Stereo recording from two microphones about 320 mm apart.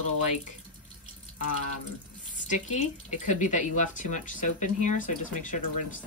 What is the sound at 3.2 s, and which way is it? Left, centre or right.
A woman's voice, left.